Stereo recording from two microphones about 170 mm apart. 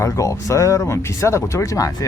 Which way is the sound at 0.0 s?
20° left (ahead or behind).